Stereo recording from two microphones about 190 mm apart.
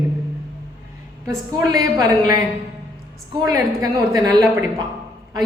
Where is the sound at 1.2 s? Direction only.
15° right (ahead or behind).